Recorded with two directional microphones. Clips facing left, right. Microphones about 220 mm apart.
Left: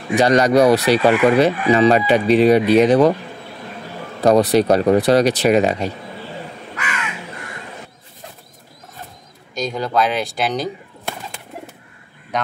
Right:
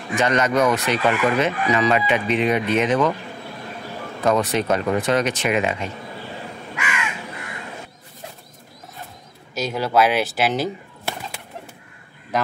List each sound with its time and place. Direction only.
0.1 s speech: 35° left (ahead or behind)
4.2 s speech: 35° left (ahead or behind)
9.6 s speech: 5° right (ahead or behind)